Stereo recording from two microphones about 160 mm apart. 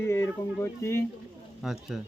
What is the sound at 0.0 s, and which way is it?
Speech, 15° left (ahead or behind).